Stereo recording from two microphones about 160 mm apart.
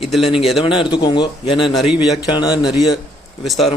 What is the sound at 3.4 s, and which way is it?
Speech, centre (ahead or behind).